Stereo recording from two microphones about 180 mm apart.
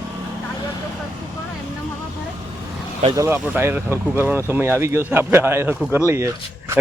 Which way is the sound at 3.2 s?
15° right (ahead or behind).